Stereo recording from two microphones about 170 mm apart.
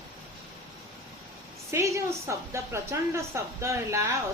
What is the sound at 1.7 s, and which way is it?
A woman's voice, 15° right (ahead or behind).